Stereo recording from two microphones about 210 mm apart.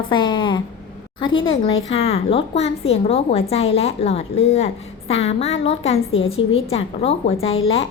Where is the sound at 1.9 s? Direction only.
30° left (ahead or behind).